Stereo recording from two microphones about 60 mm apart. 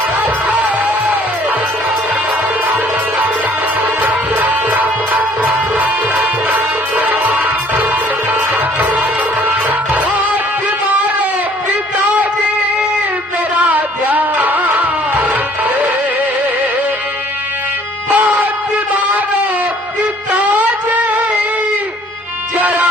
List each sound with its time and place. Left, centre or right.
0.2 s music: right
4.0 s music: right
6.5 s music: right
13.7 s music: right
18.1 s music: right
22.5 s music: right